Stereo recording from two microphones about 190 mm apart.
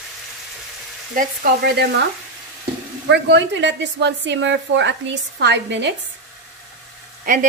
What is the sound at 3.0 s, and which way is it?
A woman's voice, 65° right (ahead or behind).